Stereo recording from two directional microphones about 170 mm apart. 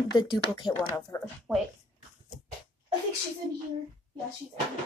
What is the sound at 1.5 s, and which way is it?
Speech, 5° left (ahead or behind).